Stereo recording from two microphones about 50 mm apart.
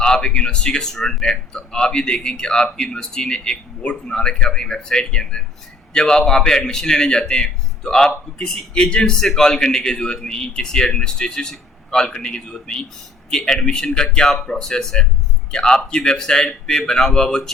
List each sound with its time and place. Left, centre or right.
0.0 s speech: centre